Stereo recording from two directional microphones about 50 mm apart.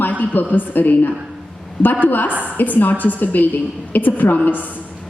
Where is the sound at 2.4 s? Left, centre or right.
Left.